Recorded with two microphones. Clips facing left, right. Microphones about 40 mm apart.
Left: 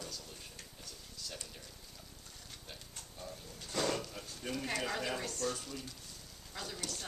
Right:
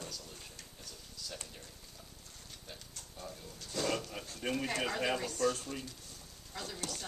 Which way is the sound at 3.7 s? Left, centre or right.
Left.